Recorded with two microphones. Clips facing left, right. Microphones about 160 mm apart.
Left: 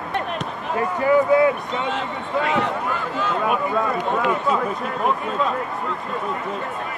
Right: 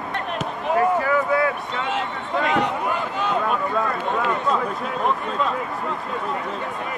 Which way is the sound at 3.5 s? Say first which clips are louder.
Left 2 dB; 5° left (ahead or behind).